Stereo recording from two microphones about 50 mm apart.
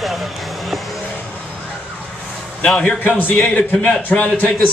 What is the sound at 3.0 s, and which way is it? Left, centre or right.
A man's voice, left.